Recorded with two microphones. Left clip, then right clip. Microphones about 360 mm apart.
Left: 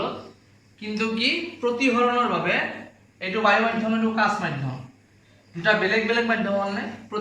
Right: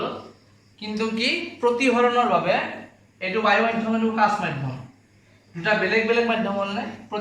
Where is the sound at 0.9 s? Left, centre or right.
Centre.